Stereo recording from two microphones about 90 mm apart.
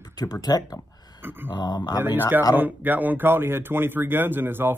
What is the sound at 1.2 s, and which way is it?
Speech, 25° right (ahead or behind).